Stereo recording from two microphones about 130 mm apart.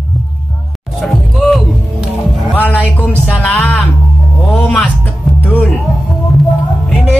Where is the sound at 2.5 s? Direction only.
10° left (ahead or behind).